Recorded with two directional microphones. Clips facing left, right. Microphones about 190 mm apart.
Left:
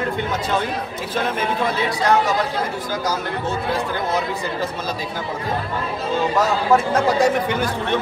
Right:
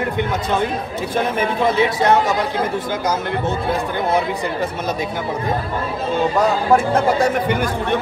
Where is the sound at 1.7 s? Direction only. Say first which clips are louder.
Right 6 dB; 20° right (ahead or behind).